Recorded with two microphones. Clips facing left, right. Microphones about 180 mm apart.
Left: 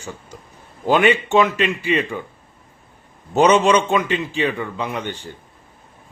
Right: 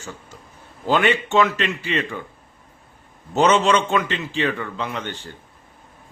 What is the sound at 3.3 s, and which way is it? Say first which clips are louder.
A man's voice: left 3 dB; 15° left (ahead or behind).